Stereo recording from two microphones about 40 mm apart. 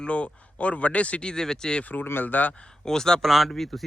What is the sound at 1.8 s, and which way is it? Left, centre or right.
Speech, left.